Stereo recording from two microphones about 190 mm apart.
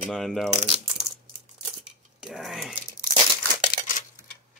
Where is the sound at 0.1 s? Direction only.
Centre (ahead or behind).